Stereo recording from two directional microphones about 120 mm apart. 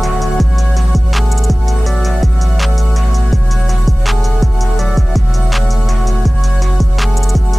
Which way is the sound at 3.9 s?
Centre (ahead or behind).